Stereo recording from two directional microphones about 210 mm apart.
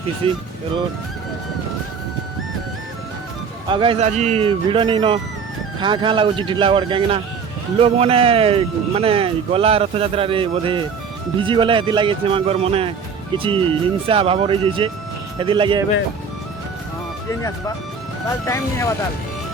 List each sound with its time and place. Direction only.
0.2 s speech: 25° right (ahead or behind)
3.7 s speech: 25° right (ahead or behind)
18.4 s speech: 15° left (ahead or behind)